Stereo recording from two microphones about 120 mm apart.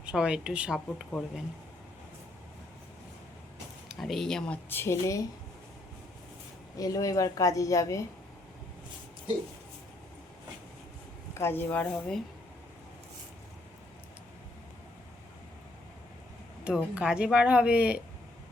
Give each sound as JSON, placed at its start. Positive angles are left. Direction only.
{"t": 0.0, "sound": "speech", "side_deg": -5}
{"t": 3.8, "sound": "speech", "side_deg": 0}
{"t": 4.7, "sound": "a woman's voice", "side_deg": 20}
{"t": 6.7, "sound": "a woman's voice", "side_deg": 30}
{"t": 11.3, "sound": "speech", "side_deg": 20}
{"t": 16.6, "sound": "speech", "side_deg": -10}